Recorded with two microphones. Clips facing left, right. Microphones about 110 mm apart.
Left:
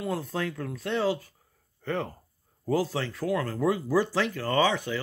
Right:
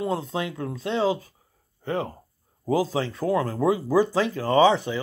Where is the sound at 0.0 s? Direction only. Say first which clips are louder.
Right 3 dB; 20° right (ahead or behind).